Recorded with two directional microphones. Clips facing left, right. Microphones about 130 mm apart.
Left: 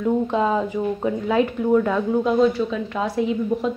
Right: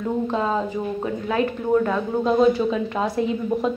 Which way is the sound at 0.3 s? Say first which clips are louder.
Left 3 dB; 15° left (ahead or behind).